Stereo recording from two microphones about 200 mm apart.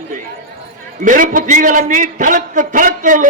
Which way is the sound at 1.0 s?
40° right (ahead or behind).